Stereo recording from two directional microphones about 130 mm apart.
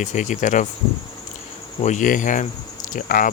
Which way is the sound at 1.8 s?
75° left (ahead or behind).